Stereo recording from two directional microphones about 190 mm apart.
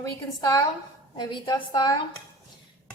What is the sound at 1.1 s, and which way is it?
Speech, 20° left (ahead or behind).